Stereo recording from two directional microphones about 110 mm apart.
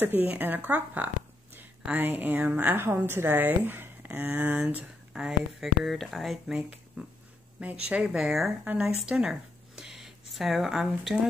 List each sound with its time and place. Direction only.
0.0 s speech: 15° right (ahead or behind)